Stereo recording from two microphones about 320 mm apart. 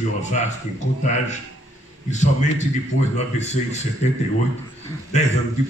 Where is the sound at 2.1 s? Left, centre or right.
Left.